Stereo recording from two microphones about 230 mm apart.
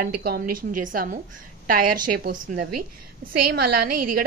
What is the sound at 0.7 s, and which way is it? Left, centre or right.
A woman's voice, right.